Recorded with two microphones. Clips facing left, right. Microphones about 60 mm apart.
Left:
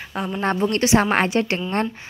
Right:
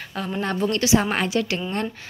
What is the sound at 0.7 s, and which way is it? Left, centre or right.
Speech, left.